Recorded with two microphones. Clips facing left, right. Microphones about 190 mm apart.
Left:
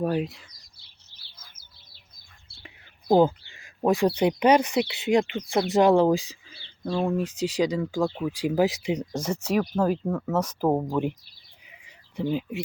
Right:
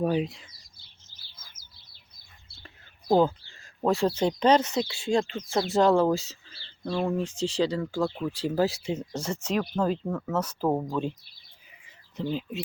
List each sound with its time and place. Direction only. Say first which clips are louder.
0.0 s speech: even; centre (ahead or behind)
1.1 s bird: left 1 dB; 30° left (ahead or behind)
2.6 s speech: left 2 dB; 20° left (ahead or behind)
12.1 s speech: left 3 dB; 10° left (ahead or behind)